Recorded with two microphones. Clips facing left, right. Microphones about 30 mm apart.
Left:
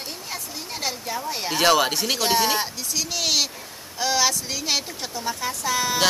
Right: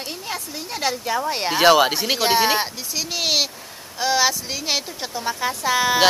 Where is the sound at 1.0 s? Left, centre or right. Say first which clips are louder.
Right 6 dB; right.